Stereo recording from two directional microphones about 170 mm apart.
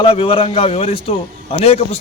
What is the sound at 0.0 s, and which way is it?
A man's voice, 30° left (ahead or behind).